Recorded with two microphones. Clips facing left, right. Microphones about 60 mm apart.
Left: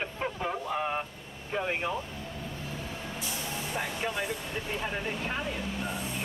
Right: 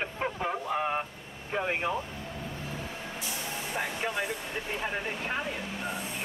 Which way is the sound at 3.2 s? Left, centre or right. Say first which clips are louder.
Even; centre.